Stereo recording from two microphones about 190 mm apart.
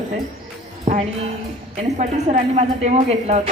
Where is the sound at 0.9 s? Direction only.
35° right (ahead or behind).